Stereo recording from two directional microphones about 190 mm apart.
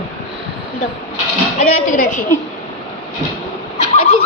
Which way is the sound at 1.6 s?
40° left (ahead or behind).